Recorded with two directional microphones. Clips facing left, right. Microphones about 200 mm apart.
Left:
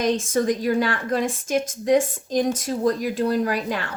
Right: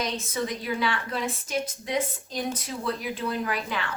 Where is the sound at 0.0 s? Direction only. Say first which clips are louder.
Left 9 dB; 45° left (ahead or behind).